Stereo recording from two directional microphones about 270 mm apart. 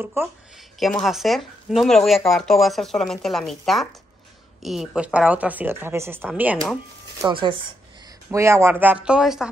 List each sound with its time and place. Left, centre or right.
0.0 s speech: centre
7.2 s speech: centre